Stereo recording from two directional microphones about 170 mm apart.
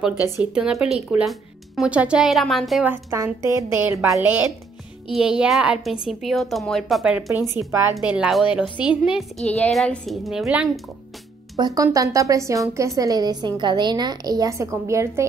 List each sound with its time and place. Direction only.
0.4 s speech: 5° right (ahead or behind)
2.9 s a woman's voice: 15° right (ahead or behind)
11.5 s a woman's voice: 20° right (ahead or behind)